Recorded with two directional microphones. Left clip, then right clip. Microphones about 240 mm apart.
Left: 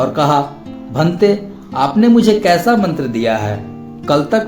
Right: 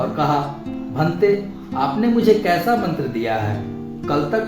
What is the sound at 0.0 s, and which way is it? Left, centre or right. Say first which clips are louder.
Speech: left 6 dB; left.